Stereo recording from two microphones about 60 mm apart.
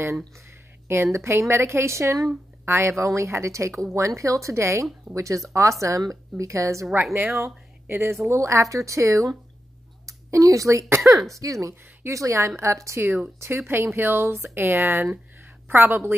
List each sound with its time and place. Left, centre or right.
0.8 s a woman's voice: right
7.9 s a woman's voice: right
8.3 s a woman's voice: right
11.0 s speech: centre
11.3 s speech: right